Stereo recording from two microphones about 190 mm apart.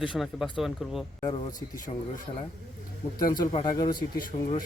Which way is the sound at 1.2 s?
20° left (ahead or behind).